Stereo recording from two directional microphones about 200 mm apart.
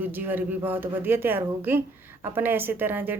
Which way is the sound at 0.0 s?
10° right (ahead or behind).